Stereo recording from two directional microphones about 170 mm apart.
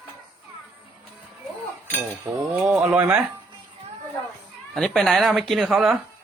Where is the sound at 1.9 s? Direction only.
10° right (ahead or behind).